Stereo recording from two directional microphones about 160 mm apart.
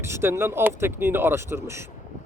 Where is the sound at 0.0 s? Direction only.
15° right (ahead or behind).